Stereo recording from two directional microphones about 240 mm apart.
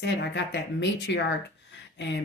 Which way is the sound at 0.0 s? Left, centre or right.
Left.